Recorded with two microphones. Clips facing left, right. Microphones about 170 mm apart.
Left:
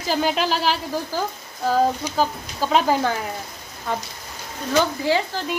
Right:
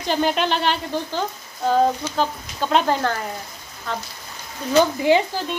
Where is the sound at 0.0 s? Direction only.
5° left (ahead or behind).